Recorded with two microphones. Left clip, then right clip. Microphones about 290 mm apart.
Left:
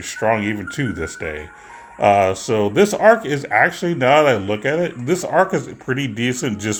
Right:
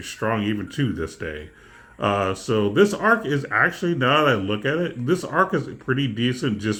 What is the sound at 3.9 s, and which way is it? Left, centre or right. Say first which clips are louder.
Speech: left 7 dB; right.